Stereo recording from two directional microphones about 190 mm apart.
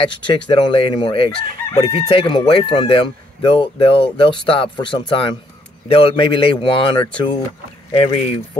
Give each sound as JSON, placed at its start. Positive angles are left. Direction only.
{"t": 0.0, "sound": "speech", "side_deg": 25}